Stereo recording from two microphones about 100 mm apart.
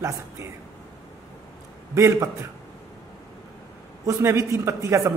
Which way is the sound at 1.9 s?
30° right (ahead or behind).